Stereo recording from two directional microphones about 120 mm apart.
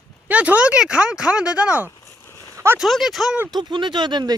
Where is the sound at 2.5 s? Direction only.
25° right (ahead or behind).